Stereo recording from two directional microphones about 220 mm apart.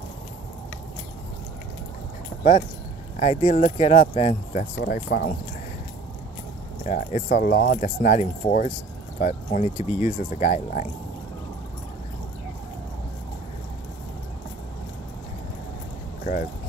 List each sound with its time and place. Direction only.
3.2 s speech: 30° left (ahead or behind)
6.8 s speech: 35° left (ahead or behind)